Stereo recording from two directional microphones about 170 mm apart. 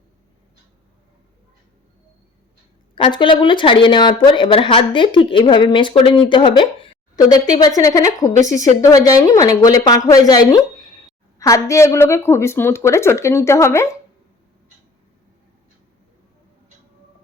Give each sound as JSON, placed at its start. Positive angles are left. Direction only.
{"t": 2.9, "sound": "a woman's voice", "side_deg": 30}
{"t": 8.3, "sound": "speech", "side_deg": -45}
{"t": 8.8, "sound": "a woman's voice", "side_deg": 20}